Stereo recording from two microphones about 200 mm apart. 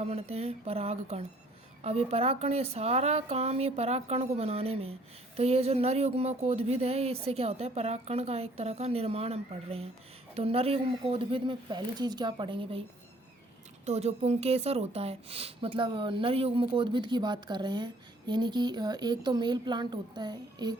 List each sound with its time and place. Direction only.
0.0 s a woman's voice: 30° right (ahead or behind)
13.8 s a woman's voice: 30° right (ahead or behind)